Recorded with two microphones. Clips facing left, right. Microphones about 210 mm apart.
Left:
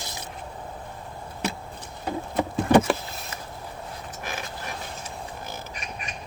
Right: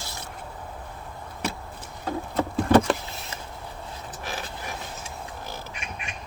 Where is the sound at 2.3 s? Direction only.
15° left (ahead or behind).